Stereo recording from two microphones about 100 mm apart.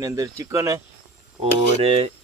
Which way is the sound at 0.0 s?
35° right (ahead or behind).